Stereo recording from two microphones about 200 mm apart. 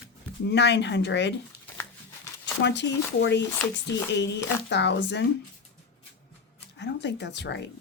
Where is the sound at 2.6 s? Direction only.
60° left (ahead or behind).